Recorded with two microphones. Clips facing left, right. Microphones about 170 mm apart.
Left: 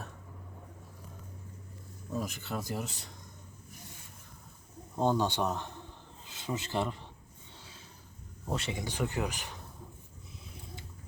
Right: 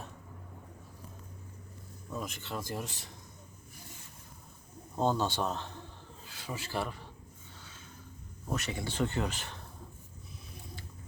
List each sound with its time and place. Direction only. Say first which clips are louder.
2.1 s speech: left 3 dB; centre (ahead or behind)
4.9 s speech: left 1 dB; 15° left (ahead or behind)
8.4 s speech: left 1 dB; 25° left (ahead or behind)
8.8 s speech: right 4 dB; 15° left (ahead or behind)